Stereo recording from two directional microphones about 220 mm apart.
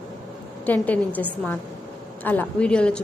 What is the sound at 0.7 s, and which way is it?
A woman's voice, 5° left (ahead or behind).